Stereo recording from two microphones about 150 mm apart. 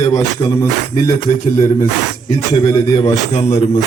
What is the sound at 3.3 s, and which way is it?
Music, 50° left (ahead or behind).